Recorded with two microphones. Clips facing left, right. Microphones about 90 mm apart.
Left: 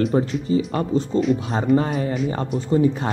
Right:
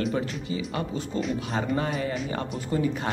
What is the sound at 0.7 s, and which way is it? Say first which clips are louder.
Speech: left 9 dB; 35° left (ahead or behind).